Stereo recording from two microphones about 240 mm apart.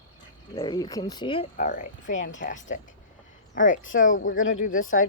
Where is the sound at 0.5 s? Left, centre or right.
Centre; by 4.4 s left.